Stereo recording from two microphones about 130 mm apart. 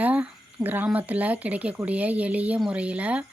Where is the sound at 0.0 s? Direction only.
10° right (ahead or behind).